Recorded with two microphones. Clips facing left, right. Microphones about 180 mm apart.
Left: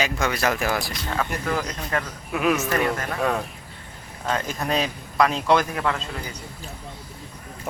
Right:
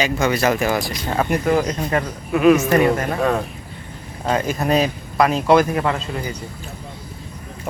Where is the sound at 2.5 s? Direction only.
15° right (ahead or behind).